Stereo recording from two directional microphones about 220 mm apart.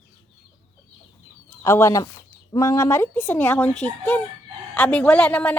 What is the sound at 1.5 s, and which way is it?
A woman's voice, 10° left (ahead or behind).